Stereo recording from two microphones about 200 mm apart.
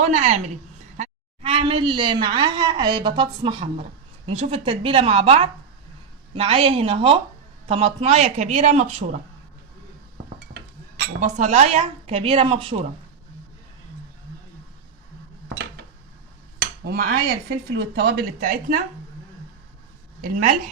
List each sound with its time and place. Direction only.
0.0 s a woman's voice: 35° right (ahead or behind)
10.5 s a sound: 40° right (ahead or behind)
11.2 s a woman's voice: 35° right (ahead or behind)
16.6 s speech: 55° right (ahead or behind)
20.2 s a woman's voice: 40° right (ahead or behind)